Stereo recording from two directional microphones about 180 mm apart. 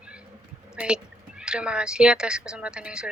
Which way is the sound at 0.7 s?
5° right (ahead or behind).